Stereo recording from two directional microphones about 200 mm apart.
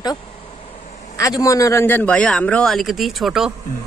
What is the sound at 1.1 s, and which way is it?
A man's voice, 15° left (ahead or behind).